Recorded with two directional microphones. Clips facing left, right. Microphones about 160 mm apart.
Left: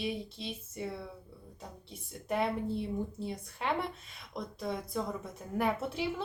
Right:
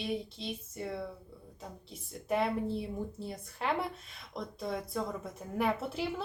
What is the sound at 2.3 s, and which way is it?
A woman's voice, centre (ahead or behind).